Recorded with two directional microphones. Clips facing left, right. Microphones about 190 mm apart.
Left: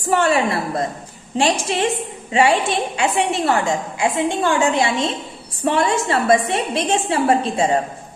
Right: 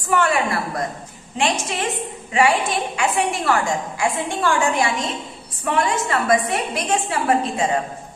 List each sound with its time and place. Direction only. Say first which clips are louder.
0.1 s a woman's voice: left 2 dB; 25° left (ahead or behind)